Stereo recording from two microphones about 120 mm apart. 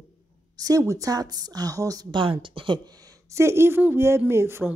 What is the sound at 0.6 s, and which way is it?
A woman's voice, 30° right (ahead or behind).